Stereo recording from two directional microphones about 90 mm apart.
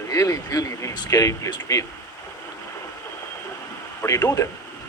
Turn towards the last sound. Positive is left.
turn(degrees=40)  # may be behind; listen again after turning